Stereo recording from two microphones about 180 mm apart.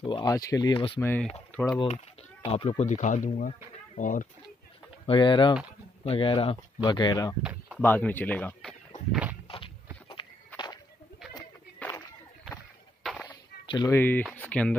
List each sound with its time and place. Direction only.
0.0 s speech: 25° left (ahead or behind)
1.0 s speech: 10° left (ahead or behind)
1.8 s speech: 35° left (ahead or behind)
5.0 s speech: 25° left (ahead or behind)
7.8 s speech: 10° left (ahead or behind)
9.1 s walk: 10° right (ahead or behind)
11.8 s a sound: 10° left (ahead or behind)
13.0 s a sound: centre (ahead or behind)
13.7 s speech: 25° left (ahead or behind)
13.9 s speech: 10° left (ahead or behind)